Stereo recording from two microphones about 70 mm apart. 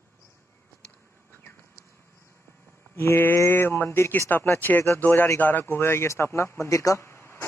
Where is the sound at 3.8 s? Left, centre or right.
Left.